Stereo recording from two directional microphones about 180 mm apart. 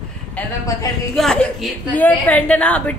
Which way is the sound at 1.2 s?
Centre (ahead or behind).